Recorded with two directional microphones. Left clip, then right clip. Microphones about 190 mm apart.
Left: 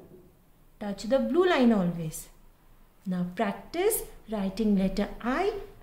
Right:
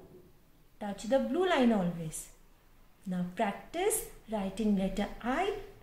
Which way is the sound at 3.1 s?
45° left (ahead or behind).